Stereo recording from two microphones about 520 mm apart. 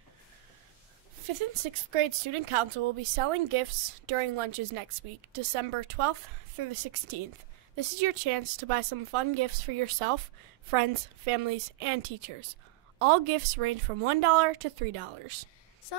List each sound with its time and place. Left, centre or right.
1.3 s speech: right